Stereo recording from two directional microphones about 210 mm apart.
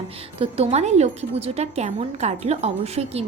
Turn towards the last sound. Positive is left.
turn(degrees=-30)  # may be behind; listen again after turning